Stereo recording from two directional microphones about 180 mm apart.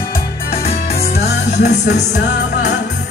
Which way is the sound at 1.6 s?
70° left (ahead or behind).